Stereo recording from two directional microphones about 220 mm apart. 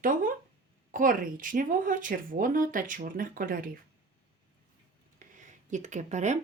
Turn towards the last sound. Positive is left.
turn(degrees=-35)  # may be behind; listen again after turning